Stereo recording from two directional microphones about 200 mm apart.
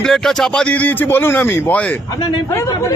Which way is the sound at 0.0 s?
Centre (ahead or behind).